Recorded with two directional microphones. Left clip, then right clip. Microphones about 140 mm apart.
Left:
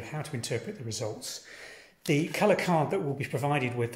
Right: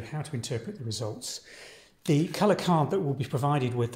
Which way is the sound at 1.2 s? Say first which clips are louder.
Right 1 dB; 55° right (ahead or behind).